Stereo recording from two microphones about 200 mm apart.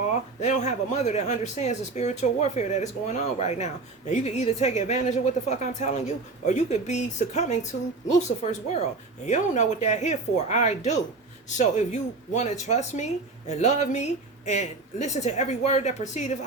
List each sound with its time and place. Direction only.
0.1 s a woman's voice: 35° left (ahead or behind)